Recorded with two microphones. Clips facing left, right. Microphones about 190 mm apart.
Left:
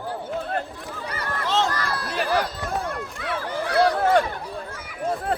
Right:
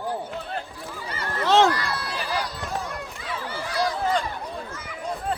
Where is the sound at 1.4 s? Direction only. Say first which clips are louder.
Right 6 dB; 75° right (ahead or behind).